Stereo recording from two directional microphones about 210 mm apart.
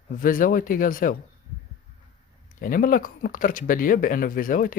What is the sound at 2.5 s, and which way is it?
Speech, 40° left (ahead or behind).